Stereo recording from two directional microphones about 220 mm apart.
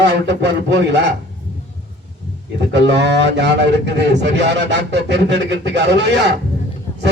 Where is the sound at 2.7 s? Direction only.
50° right (ahead or behind).